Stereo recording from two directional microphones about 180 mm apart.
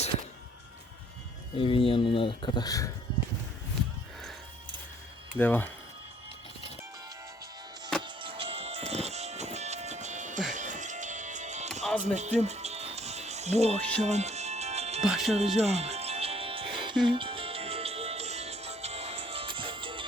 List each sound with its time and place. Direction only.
1.5 s speech: 30° left (ahead or behind)
5.4 s speech: 10° left (ahead or behind)
8.0 s music: 30° right (ahead or behind)
15.0 s speech: centre (ahead or behind)
15.3 s music: 35° right (ahead or behind)